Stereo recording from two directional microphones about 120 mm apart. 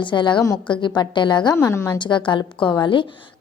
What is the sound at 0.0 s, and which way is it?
A woman's voice, 40° left (ahead or behind).